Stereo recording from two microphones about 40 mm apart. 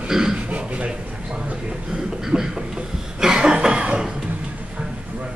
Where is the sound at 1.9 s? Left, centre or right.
Centre.